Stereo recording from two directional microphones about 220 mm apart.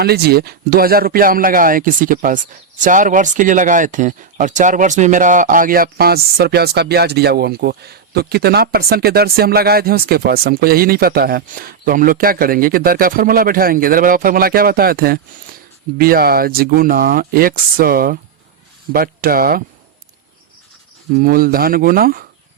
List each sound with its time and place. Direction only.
0.0 s speech: 45° right (ahead or behind)
21.2 s speech: 40° right (ahead or behind)